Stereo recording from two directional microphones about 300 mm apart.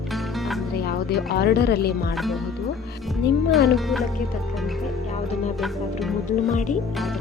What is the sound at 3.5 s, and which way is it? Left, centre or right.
Speech, centre.